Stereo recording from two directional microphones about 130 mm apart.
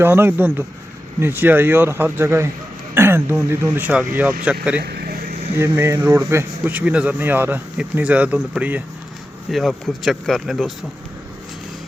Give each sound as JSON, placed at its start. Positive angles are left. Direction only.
{"t": 0.0, "sound": "a man's voice", "side_deg": -15}
{"t": 9.5, "sound": "speech", "side_deg": 0}